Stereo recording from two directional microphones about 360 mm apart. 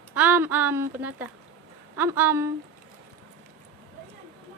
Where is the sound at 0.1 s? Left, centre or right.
Centre.